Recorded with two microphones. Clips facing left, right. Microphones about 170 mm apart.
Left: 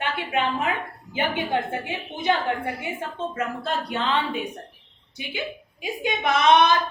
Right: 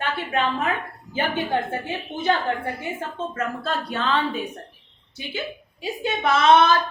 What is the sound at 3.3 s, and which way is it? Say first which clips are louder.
A woman's voice: right 1 dB; 15° left (ahead or behind).